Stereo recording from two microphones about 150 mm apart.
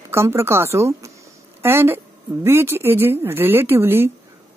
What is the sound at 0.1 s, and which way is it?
Speech, 15° right (ahead or behind).